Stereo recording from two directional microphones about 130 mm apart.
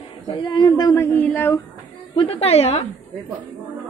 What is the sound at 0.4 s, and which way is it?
Speech, 35° left (ahead or behind).